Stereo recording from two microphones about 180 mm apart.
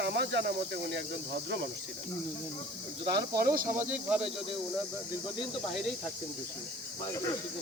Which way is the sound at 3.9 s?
5° right (ahead or behind).